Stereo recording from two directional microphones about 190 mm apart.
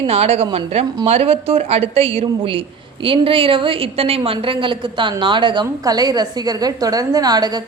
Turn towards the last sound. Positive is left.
turn(degrees=-20)  # may be behind; listen again after turning